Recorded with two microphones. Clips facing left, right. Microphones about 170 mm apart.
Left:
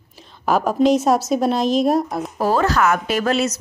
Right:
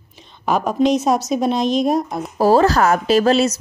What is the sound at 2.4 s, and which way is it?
Speech, 35° right (ahead or behind).